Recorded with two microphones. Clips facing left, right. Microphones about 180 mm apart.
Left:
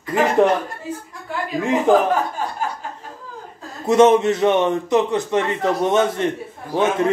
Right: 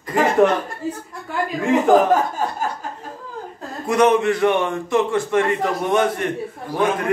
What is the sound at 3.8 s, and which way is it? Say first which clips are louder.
A man's voice: left 3 dB; 25° left (ahead or behind).